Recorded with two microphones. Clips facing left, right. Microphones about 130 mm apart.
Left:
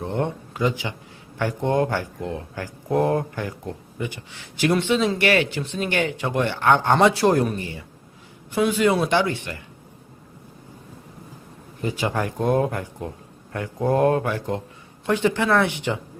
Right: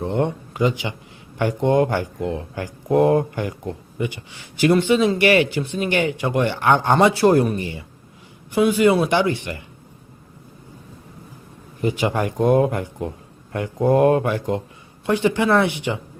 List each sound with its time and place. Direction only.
0.0 s a man's voice: 15° right (ahead or behind)
6.9 s a man's voice: centre (ahead or behind)
8.5 s a man's voice: 5° right (ahead or behind)
11.8 s speech: 15° right (ahead or behind)